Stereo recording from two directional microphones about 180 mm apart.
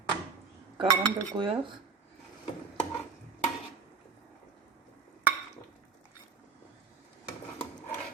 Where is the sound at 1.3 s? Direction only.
25° right (ahead or behind).